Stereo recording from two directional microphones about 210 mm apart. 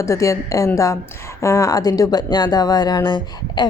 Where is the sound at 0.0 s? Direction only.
15° left (ahead or behind).